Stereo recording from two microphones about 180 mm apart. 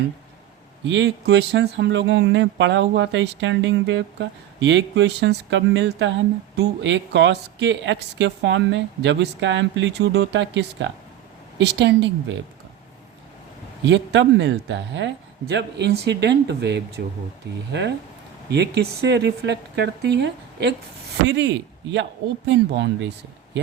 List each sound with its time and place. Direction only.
0.9 s speech: 80° right
11.5 s speech: 70° right (ahead or behind)
13.8 s speech: 80° right